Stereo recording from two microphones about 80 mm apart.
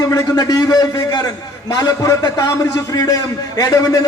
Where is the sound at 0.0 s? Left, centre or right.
Left.